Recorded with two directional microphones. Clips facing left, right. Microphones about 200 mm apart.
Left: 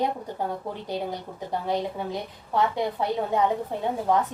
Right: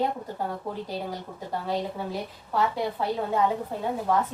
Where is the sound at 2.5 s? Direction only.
20° left (ahead or behind).